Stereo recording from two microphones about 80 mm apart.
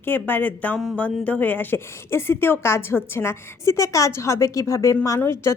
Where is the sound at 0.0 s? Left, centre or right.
Left.